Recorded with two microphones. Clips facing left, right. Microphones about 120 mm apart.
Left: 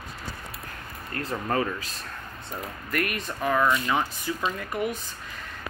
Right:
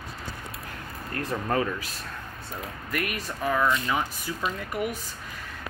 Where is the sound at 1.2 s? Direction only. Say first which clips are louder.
Even; 15° right (ahead or behind).